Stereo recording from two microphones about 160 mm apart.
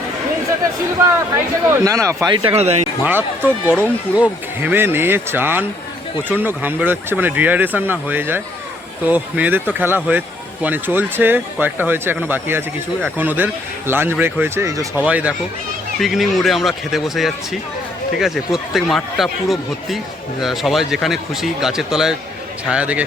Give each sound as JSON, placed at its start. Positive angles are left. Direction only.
{"t": 1.8, "sound": "speech", "side_deg": -20}
{"t": 2.2, "sound": "speech", "side_deg": -30}
{"t": 2.6, "sound": "speech", "side_deg": -40}
{"t": 3.0, "sound": "speech", "side_deg": -10}
{"t": 15.0, "sound": "speech", "side_deg": -10}